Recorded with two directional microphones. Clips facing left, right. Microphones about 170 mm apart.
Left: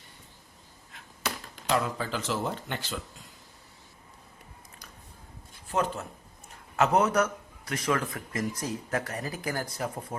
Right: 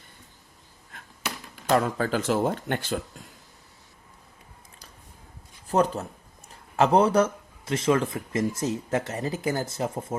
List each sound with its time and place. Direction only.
0.9 s a sound: 50° right (ahead or behind)
1.7 s speech: 45° right (ahead or behind)
5.6 s a man's voice: 40° right (ahead or behind)